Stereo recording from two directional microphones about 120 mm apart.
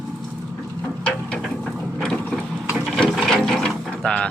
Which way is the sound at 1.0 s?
5° left (ahead or behind).